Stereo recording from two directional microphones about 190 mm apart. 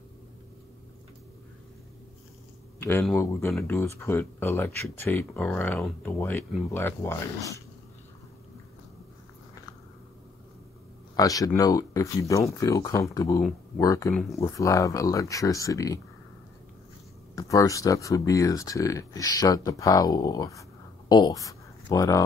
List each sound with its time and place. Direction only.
2.8 s speech: 10° left (ahead or behind)
11.1 s speech: 20° left (ahead or behind)
17.4 s speech: 15° left (ahead or behind)